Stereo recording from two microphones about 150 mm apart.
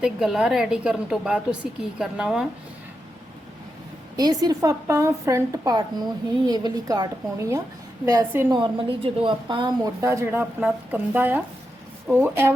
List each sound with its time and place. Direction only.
0.0 s a woman's voice: 5° right (ahead or behind)
4.2 s a woman's voice: 25° right (ahead or behind)
8.4 s a woman's voice: 30° right (ahead or behind); by 12.5 s 15° right (ahead or behind)